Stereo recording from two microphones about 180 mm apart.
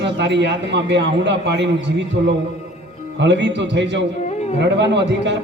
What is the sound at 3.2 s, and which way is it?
A man's voice, 75° right (ahead or behind).